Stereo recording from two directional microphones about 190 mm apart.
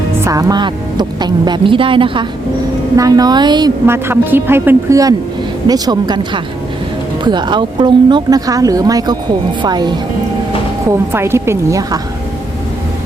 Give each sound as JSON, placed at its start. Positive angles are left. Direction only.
{"t": 0.3, "sound": "a woman's voice", "side_deg": -20}